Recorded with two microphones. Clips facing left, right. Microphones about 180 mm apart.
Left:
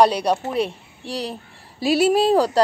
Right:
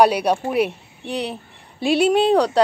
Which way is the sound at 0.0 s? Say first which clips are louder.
Right 1 dB; 10° right (ahead or behind).